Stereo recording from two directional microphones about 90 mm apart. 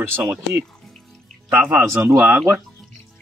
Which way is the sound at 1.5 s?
20° right (ahead or behind).